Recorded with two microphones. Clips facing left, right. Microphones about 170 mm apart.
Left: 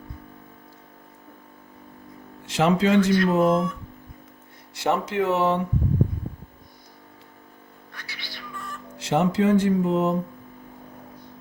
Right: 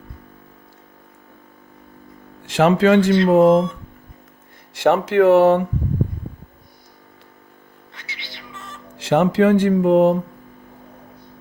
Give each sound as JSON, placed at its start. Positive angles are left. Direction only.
{"t": 2.6, "sound": "speech", "side_deg": -60}
{"t": 3.5, "sound": "speech", "side_deg": -25}
{"t": 4.8, "sound": "speech", "side_deg": -70}
{"t": 7.9, "sound": "music", "side_deg": -20}
{"t": 9.0, "sound": "speech", "side_deg": -75}